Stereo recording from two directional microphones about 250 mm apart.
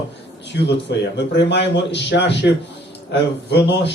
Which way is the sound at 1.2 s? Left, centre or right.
Left.